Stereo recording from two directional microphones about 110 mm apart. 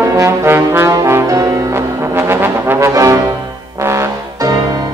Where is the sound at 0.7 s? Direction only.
25° right (ahead or behind).